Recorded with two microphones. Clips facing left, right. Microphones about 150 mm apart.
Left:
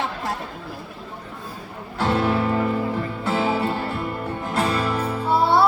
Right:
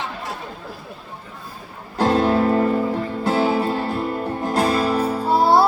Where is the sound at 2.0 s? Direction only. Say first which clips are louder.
Right 4 dB; 40° right (ahead or behind).